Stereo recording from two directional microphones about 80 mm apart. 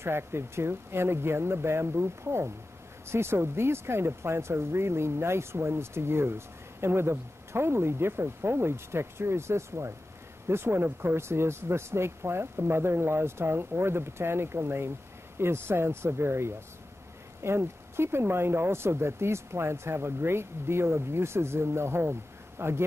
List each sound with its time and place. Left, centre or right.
0.0 s speech: right